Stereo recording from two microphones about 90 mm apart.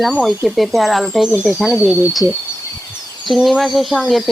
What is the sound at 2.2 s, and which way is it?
Speech, 35° right (ahead or behind).